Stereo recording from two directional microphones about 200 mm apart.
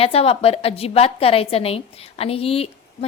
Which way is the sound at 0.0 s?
30° left (ahead or behind).